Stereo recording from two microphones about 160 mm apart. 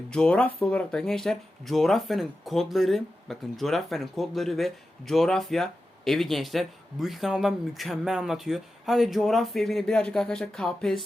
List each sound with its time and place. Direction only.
0.1 s speech: 5° left (ahead or behind)